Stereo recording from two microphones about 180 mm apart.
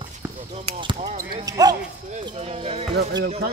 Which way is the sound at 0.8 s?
30° right (ahead or behind).